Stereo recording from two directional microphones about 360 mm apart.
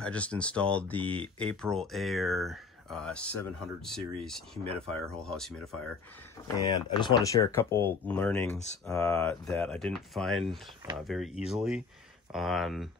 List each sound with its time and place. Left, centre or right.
0.0 s speech: centre